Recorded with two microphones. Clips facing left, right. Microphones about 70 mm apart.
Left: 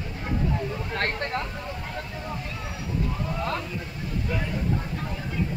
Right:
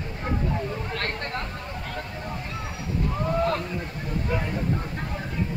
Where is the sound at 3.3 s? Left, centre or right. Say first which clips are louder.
Right 7 dB; right.